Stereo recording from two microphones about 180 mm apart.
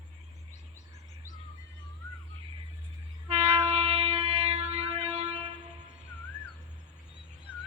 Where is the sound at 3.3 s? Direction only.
35° right (ahead or behind).